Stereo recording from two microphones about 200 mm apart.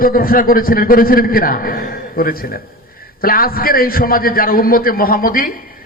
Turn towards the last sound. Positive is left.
turn(degrees=45)  # may be behind; listen again after turning